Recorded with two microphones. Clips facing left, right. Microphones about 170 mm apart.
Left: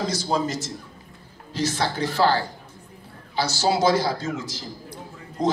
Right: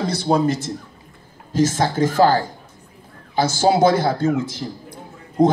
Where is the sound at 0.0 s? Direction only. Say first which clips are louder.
Right 6 dB; 60° right (ahead or behind).